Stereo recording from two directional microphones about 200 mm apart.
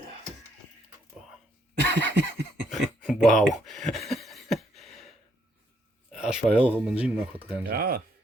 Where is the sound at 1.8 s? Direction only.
60° right (ahead or behind).